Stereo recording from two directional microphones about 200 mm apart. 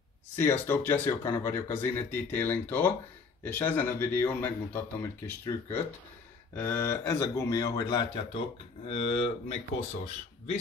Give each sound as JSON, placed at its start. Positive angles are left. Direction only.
{"t": 0.4, "sound": "speech", "side_deg": 10}